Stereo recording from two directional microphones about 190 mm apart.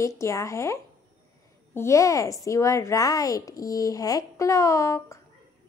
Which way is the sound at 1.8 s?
15° left (ahead or behind).